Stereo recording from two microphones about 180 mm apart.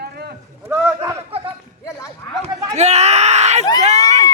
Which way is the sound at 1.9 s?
15° left (ahead or behind).